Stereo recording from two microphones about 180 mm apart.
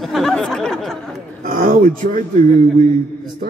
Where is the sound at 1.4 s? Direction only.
50° right (ahead or behind).